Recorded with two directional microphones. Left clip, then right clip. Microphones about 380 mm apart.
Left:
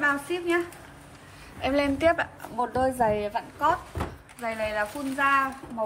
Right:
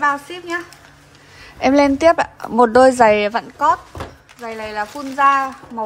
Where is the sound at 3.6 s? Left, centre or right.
Centre.